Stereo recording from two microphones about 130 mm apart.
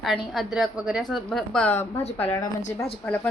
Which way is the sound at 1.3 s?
5° left (ahead or behind).